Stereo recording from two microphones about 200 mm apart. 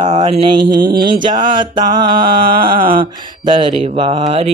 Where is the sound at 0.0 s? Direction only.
35° right (ahead or behind).